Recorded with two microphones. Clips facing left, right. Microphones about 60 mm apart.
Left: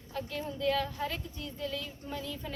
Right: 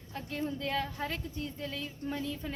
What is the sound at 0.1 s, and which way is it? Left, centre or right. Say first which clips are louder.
A woman's voice: right 1 dB; right.